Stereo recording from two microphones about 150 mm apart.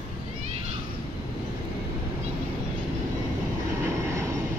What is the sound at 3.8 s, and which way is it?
Vehicle, 20° right (ahead or behind).